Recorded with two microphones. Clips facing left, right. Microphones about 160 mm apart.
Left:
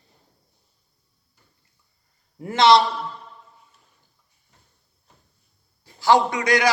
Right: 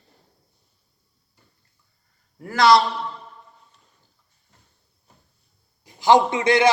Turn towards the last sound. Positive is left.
turn(degrees=-25)  # may be behind; listen again after turning